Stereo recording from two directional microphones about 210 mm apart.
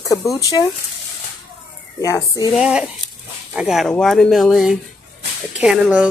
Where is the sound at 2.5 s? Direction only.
5° right (ahead or behind).